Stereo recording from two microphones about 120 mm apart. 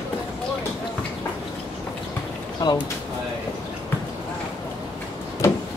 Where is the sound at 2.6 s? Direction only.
35° left (ahead or behind).